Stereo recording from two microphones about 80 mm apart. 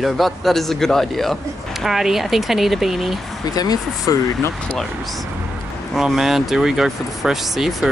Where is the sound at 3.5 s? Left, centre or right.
Left.